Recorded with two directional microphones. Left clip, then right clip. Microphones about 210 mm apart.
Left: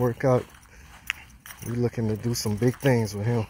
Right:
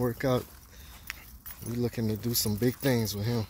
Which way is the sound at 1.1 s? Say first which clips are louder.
Left 10 dB; 45° left (ahead or behind).